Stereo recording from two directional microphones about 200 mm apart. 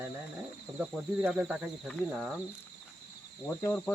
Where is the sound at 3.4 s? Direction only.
10° left (ahead or behind).